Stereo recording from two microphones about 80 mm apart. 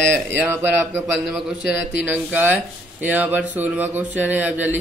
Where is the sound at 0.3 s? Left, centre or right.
Right.